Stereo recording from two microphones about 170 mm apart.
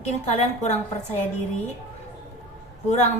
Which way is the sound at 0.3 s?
40° left (ahead or behind).